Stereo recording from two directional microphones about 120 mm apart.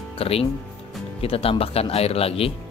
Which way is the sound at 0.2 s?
55° left (ahead or behind).